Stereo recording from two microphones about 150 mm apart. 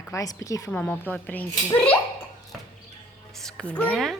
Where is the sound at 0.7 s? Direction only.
10° left (ahead or behind).